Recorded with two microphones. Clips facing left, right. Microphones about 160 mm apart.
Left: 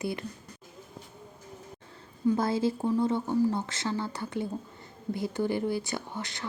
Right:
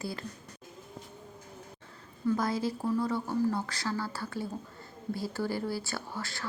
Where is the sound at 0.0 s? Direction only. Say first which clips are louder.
Left 5 dB; 20° left (ahead or behind).